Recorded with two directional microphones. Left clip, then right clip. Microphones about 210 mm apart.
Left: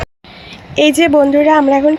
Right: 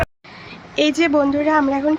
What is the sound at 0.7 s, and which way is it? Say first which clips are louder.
Speech: left 7 dB; 30° left (ahead or behind).